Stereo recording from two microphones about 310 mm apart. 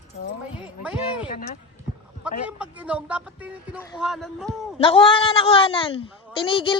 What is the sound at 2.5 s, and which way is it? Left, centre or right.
Speech, centre.